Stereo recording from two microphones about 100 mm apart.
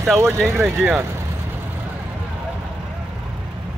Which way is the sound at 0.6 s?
15° right (ahead or behind).